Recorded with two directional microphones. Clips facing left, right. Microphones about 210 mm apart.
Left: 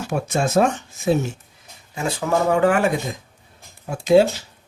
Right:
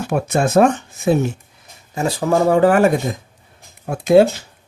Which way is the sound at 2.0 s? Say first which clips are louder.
Right 4 dB; 35° right (ahead or behind).